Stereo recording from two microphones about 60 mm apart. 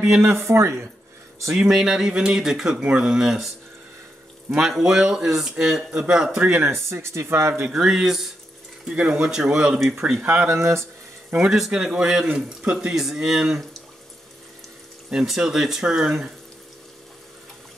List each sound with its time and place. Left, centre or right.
0.2 s speech: right
1.5 s speech: centre
4.5 s speech: centre
6.6 s speech: right
7.7 s speech: centre
8.8 s speech: centre
10.2 s speech: right
10.5 s speech: right
11.3 s speech: centre
15.0 s speech: centre